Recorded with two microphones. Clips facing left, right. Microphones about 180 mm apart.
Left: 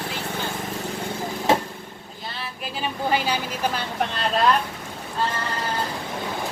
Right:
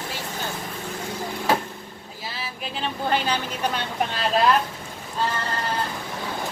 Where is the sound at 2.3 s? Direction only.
5° right (ahead or behind).